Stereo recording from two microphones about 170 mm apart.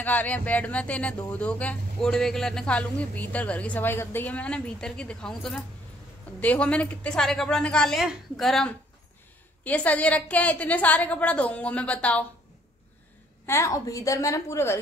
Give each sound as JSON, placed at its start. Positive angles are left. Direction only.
{"t": 0.0, "sound": "a woman's voice", "side_deg": 10}
{"t": 13.5, "sound": "speech", "side_deg": 15}